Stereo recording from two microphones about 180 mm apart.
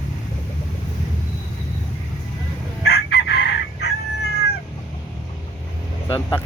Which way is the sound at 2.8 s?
65° left (ahead or behind).